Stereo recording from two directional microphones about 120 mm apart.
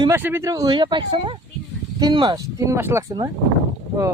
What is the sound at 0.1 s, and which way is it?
Speech, 20° right (ahead or behind).